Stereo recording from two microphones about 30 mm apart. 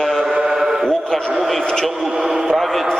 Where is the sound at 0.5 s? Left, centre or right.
Centre.